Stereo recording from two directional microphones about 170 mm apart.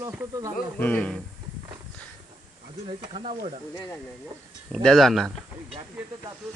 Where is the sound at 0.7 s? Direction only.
10° left (ahead or behind).